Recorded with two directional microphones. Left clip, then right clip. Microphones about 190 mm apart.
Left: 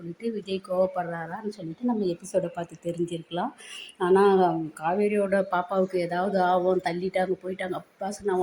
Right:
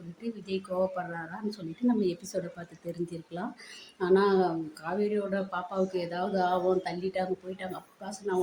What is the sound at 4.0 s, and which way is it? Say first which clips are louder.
Speech: left 5 dB; 15° left (ahead or behind).